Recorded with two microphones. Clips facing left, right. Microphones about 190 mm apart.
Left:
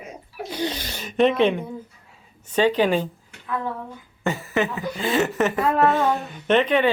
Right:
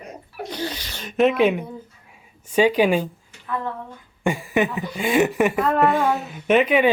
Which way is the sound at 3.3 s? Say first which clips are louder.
Left 2 dB; 60° left (ahead or behind).